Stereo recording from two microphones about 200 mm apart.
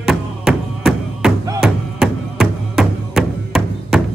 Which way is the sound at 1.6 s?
Centre (ahead or behind).